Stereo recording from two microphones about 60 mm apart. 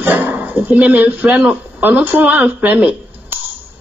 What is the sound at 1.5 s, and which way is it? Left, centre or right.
Speech, right.